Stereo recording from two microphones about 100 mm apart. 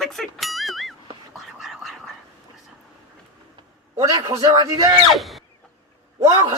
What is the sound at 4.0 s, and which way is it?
Speech, 40° right (ahead or behind).